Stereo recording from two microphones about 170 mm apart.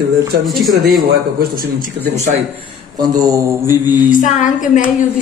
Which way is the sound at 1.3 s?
60° right (ahead or behind).